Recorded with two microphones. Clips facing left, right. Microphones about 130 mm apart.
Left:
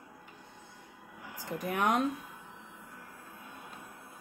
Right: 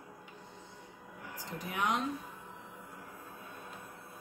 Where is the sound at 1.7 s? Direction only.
50° left (ahead or behind).